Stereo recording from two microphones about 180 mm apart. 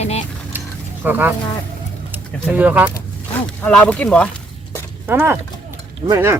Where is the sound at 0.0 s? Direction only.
35° left (ahead or behind).